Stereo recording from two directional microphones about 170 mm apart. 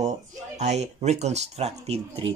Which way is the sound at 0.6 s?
40° right (ahead or behind).